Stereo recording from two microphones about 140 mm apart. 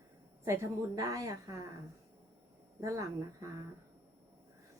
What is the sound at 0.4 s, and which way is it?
A woman's voice, 20° right (ahead or behind).